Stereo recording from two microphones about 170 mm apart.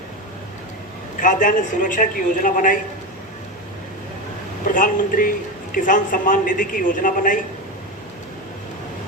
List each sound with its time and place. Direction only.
1.2 s a man's voice: 50° left (ahead or behind)
4.6 s a man's voice: 50° left (ahead or behind)